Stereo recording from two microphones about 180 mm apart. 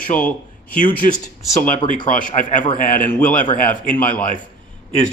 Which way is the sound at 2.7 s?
50° left (ahead or behind).